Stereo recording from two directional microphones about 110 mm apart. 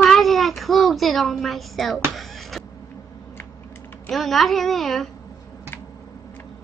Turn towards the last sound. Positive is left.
turn(degrees=0)  # may be behind; listen again after turning